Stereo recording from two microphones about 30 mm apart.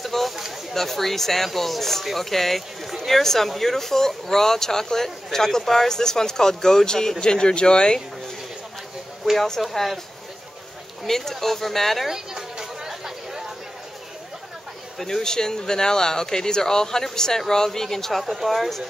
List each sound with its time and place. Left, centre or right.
0.0 s a sound: centre
0.7 s speech: centre; by 8.0 s left
9.6 s speech: centre
11.1 s speech: centre
12.1 s chatter: centre
15.0 s speech: centre
18.2 s speech: centre